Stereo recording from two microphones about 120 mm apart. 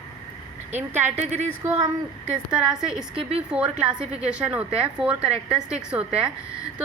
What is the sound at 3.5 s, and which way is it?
A woman's voice, 5° right (ahead or behind).